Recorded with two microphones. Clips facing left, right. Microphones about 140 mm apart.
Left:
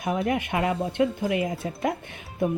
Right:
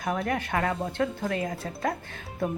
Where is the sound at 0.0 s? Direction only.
20° left (ahead or behind).